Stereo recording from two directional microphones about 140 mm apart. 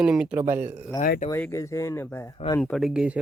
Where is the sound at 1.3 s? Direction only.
20° left (ahead or behind).